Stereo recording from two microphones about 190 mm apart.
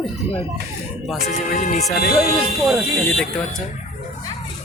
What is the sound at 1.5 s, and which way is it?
Speech, 35° left (ahead or behind).